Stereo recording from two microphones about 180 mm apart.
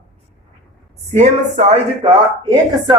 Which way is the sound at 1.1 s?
40° right (ahead or behind).